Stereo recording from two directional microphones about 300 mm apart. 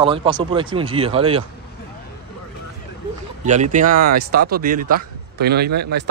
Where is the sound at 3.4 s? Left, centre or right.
Right.